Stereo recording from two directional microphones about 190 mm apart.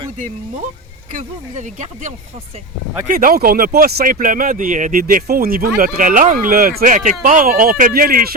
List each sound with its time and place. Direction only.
1.1 s speech: 40° right (ahead or behind)